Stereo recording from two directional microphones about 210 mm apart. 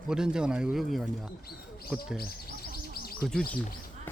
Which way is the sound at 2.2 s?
45° left (ahead or behind).